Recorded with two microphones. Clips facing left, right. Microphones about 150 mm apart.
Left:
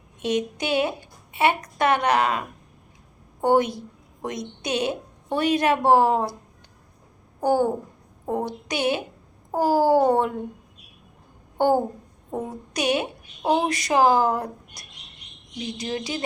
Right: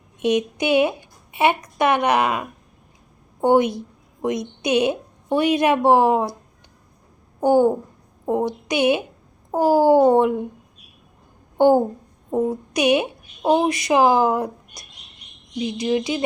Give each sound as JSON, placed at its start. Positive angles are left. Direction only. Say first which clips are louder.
{"t": 0.2, "sound": "speech", "louder": "right 5 dB", "side_deg": -15}
{"t": 3.4, "sound": "a woman's voice", "louder": "right 3 dB", "side_deg": -15}
{"t": 7.4, "sound": "speech", "louder": "right 5 dB", "side_deg": -15}
{"t": 11.5, "sound": "a sound", "louder": "right 5 dB", "side_deg": -20}
{"t": 12.3, "sound": "speech", "louder": "right 9 dB", "side_deg": -15}
{"t": 15.8, "sound": "speech", "louder": "right 8 dB", "side_deg": -15}